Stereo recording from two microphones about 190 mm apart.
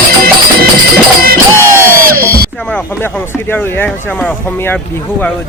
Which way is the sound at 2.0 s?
50° right (ahead or behind).